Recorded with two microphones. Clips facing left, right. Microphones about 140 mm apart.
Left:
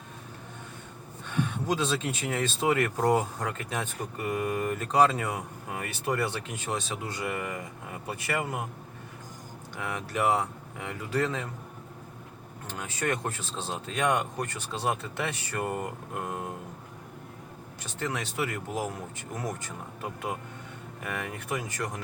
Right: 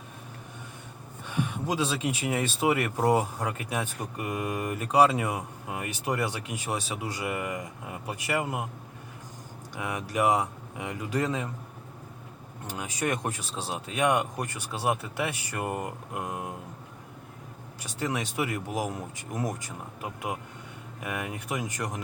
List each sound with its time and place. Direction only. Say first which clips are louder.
1.3 s speech: left 1 dB; 10° right (ahead or behind)
9.7 s speech: right 2 dB; 15° right (ahead or behind)
12.6 s speech: right 1 dB; 15° right (ahead or behind)
17.7 s speech: right 2 dB; 10° right (ahead or behind)